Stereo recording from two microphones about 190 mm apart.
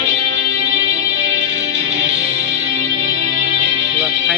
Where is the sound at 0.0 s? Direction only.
65° right (ahead or behind).